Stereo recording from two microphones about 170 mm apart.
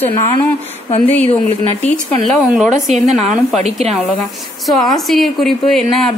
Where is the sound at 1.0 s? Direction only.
10° left (ahead or behind).